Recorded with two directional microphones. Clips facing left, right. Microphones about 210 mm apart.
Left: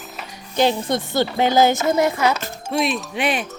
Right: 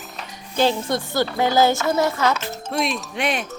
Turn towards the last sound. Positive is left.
turn(degrees=5)  # may be behind; listen again after turning